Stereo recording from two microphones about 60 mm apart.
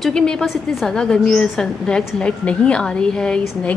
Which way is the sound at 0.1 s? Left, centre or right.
Centre.